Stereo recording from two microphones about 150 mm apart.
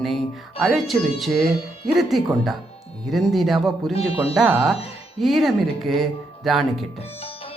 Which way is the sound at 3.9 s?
40° left (ahead or behind).